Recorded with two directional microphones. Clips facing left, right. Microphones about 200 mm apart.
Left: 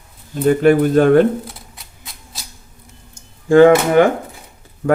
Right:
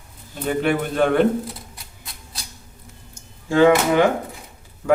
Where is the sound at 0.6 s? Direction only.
40° left (ahead or behind).